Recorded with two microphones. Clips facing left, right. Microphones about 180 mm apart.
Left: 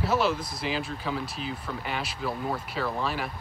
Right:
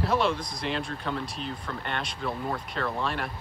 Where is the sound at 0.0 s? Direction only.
5° left (ahead or behind).